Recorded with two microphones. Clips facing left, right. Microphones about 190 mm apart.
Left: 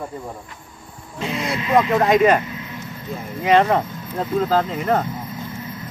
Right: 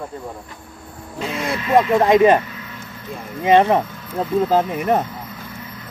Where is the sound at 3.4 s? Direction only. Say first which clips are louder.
Right 2 dB; 25° right (ahead or behind).